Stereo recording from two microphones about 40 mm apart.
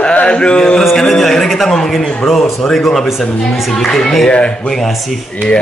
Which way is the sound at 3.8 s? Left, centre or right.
Centre.